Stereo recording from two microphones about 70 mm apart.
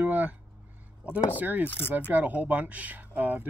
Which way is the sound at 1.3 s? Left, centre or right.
Right.